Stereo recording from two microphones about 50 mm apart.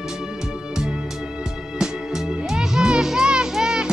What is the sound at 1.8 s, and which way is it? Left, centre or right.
Music, centre.